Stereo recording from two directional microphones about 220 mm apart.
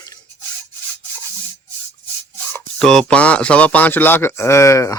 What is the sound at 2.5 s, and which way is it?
Speech, 5° left (ahead or behind).